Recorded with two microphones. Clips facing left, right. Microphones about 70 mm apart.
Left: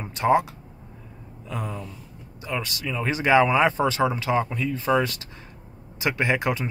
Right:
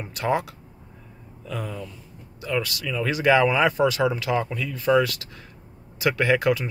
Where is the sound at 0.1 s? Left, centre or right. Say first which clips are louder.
Left 4 dB; left.